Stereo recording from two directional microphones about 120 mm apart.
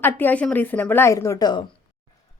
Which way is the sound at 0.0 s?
15° left (ahead or behind).